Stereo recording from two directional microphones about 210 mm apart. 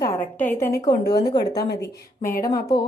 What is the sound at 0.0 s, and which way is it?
A woman's voice, 10° left (ahead or behind).